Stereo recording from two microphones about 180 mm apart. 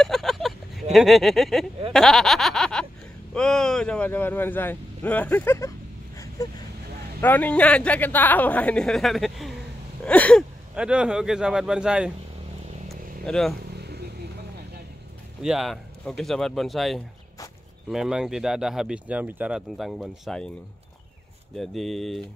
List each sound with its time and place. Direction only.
0.0 s vehicle: centre (ahead or behind)
0.9 s a man's voice: centre (ahead or behind)
6.1 s a sound: 20° left (ahead or behind)
7.2 s a man's voice: 10° left (ahead or behind)
10.7 s speech: 5° right (ahead or behind)
12.8 s vehicle: centre (ahead or behind)
13.7 s a sound: 65° right (ahead or behind)
15.4 s speech: centre (ahead or behind)
21.5 s speech: centre (ahead or behind)